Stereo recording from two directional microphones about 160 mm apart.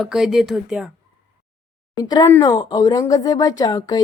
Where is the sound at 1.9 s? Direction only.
25° left (ahead or behind).